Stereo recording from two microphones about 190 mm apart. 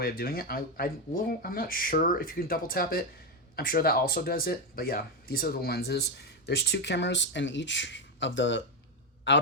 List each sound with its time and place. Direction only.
0.0 s a man's voice: 50° left (ahead or behind); by 9.4 s 75° left (ahead or behind)